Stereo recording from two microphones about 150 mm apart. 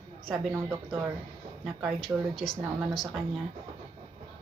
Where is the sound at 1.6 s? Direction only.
Centre (ahead or behind).